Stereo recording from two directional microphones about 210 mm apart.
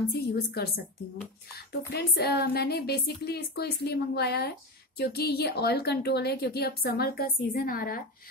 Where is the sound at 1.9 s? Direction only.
50° left (ahead or behind).